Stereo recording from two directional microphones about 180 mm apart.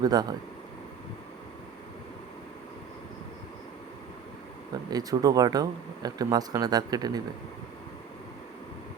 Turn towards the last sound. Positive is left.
turn(degrees=-20)  # may be behind; listen again after turning